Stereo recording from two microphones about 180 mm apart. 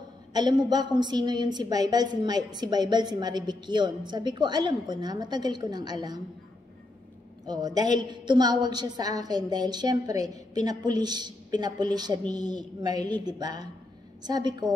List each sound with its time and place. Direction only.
0.3 s a woman's voice: 25° right (ahead or behind)
7.4 s a woman's voice: 20° right (ahead or behind)